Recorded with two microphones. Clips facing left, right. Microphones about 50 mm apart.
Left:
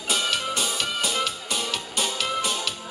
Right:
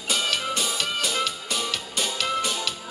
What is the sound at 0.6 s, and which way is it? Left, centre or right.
Music, centre.